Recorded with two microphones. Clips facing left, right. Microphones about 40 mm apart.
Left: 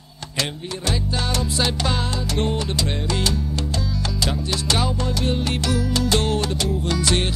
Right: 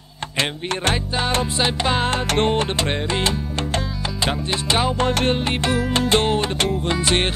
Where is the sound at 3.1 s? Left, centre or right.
Right.